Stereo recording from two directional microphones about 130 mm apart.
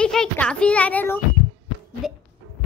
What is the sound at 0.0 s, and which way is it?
Speech, 5° left (ahead or behind).